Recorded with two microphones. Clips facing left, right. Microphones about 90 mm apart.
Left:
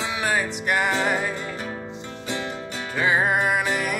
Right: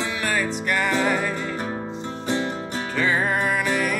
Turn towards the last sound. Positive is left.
turn(degrees=15)  # may be behind; listen again after turning